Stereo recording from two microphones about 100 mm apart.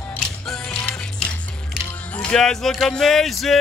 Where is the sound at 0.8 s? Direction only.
10° left (ahead or behind).